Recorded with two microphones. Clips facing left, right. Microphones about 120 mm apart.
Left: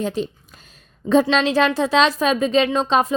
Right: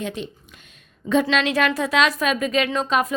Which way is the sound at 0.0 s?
35° left (ahead or behind).